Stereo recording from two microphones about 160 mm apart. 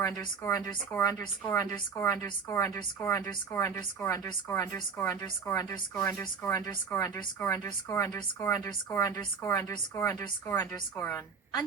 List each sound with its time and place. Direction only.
0.0 s speech: 15° left (ahead or behind)